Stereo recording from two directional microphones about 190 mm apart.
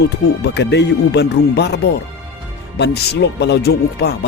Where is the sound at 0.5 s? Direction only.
60° left (ahead or behind).